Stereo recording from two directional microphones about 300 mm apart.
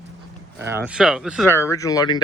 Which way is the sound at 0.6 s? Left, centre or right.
Centre.